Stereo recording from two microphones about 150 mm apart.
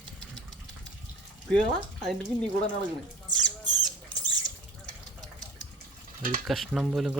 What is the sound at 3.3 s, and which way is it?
Rodents, 25° right (ahead or behind).